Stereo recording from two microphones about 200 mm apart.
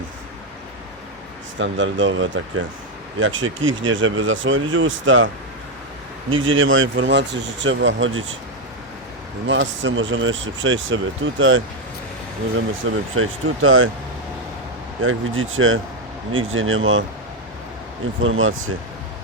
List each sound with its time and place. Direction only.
1.5 s speech: 70° right (ahead or behind)
6.3 s speech: 75° right (ahead or behind)
9.5 s speech: 70° right (ahead or behind)
13.1 s speech: 90° right
15.0 s speech: 90° right
18.2 s speech: 85° right